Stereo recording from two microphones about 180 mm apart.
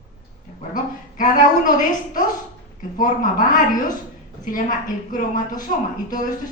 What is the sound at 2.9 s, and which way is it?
Speech, 50° left (ahead or behind).